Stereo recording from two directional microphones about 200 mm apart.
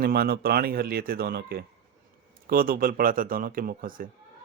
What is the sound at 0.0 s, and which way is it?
Speech, 50° right (ahead or behind).